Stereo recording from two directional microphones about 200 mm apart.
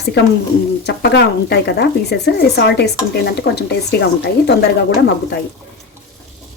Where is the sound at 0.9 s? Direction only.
60° left (ahead or behind).